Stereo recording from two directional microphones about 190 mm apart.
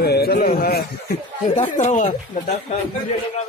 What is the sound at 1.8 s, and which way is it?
Speech, 40° left (ahead or behind).